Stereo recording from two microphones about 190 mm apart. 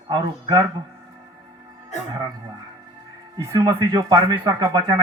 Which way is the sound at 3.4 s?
15° right (ahead or behind).